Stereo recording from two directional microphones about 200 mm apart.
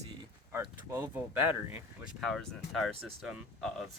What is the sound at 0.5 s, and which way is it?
Speech, 10° right (ahead or behind).